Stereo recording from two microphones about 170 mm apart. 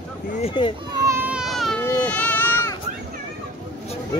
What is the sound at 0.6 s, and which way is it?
Speech, 30° left (ahead or behind).